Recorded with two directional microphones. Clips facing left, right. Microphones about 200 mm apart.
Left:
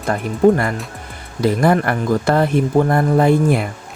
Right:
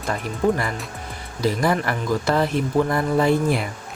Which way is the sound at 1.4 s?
55° left (ahead or behind).